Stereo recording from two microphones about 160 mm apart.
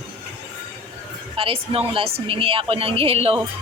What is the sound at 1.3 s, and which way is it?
A woman's voice, 35° right (ahead or behind).